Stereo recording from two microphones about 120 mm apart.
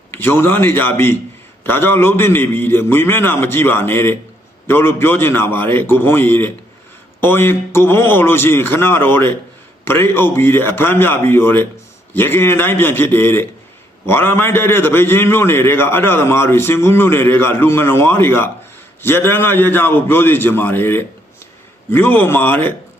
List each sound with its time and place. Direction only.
0.1 s a man's voice: 20° left (ahead or behind)